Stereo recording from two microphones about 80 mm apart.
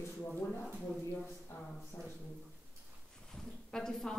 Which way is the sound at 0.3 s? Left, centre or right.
Left.